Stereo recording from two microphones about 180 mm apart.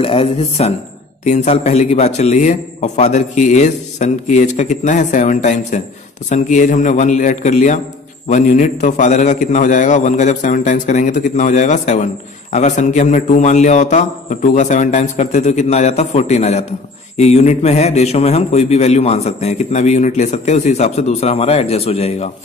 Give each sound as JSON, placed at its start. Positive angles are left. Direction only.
{"t": 0.0, "sound": "a man's voice", "side_deg": 30}